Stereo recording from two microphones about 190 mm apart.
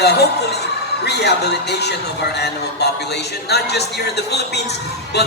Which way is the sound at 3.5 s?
60° left (ahead or behind).